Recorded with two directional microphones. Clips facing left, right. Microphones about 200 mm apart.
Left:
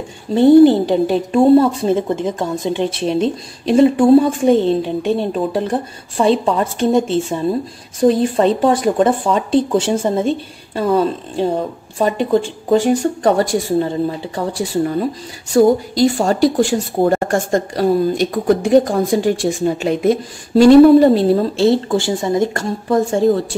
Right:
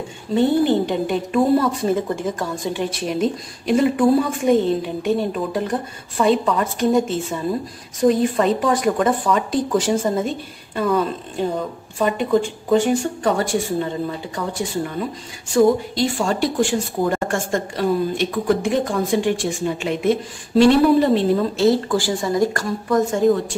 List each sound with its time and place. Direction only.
0.3 s a woman's voice: 35° left (ahead or behind)